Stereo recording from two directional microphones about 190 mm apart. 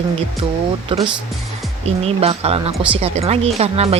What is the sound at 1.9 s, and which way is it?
Speech, 30° right (ahead or behind).